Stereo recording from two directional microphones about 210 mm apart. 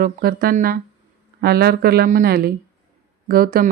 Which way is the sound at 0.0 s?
45° right (ahead or behind).